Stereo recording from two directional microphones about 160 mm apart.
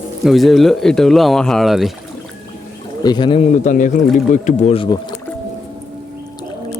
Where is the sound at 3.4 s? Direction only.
50° left (ahead or behind); by 5.0 s 35° left (ahead or behind).